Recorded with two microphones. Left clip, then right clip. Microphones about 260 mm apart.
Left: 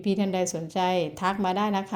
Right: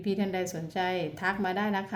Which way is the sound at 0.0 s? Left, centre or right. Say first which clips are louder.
Left 4 dB; left.